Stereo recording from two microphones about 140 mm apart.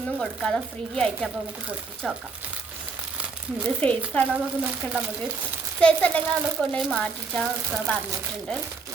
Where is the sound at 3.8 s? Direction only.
10° left (ahead or behind).